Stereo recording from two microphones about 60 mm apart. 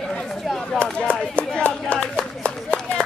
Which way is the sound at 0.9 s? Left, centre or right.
Left.